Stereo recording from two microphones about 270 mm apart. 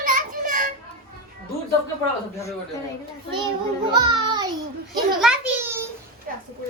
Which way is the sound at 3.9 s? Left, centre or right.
Centre.